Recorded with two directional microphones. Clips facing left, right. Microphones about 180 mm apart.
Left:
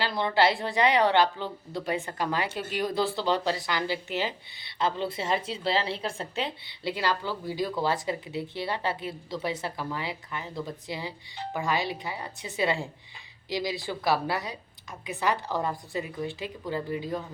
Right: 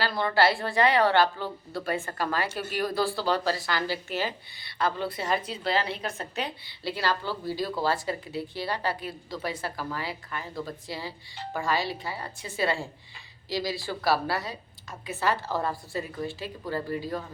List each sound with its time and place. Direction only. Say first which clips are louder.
0.0 s speech: even; 20° left (ahead or behind)